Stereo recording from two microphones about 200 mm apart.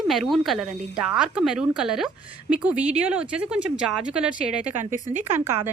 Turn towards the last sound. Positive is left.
turn(degrees=-10)  # may be behind; listen again after turning